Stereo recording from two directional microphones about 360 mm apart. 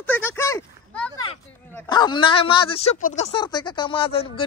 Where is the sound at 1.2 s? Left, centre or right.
Centre.